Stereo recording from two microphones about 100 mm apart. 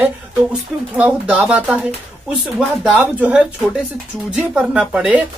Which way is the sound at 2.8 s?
15° right (ahead or behind).